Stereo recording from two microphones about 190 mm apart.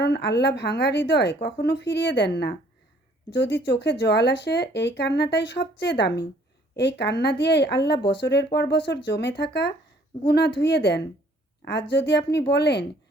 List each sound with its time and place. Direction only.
0.0 s speech: 60° left (ahead or behind)